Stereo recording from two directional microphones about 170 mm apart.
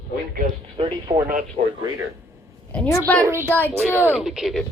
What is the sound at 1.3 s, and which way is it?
Speech, 50° right (ahead or behind).